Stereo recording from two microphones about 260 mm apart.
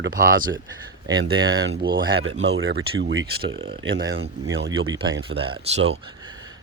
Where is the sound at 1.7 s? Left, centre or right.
Right.